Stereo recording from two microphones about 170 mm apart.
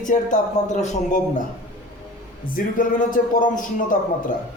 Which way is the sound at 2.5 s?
55° left (ahead or behind).